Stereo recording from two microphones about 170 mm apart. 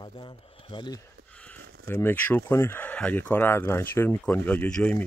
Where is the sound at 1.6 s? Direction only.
65° right (ahead or behind).